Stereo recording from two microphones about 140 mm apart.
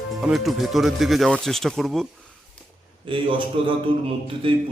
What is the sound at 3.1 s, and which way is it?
Speech, 40° right (ahead or behind).